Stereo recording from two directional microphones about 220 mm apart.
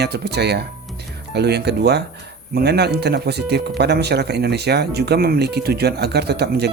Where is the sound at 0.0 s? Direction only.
50° right (ahead or behind).